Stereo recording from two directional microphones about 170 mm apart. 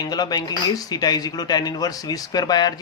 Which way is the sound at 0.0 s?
25° left (ahead or behind).